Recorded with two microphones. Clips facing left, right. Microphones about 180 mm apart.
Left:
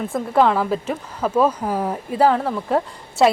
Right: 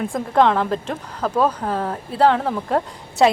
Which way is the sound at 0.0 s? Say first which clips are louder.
Even; 5° left (ahead or behind).